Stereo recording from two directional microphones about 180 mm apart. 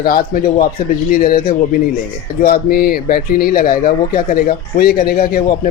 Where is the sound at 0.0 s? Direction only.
55° left (ahead or behind).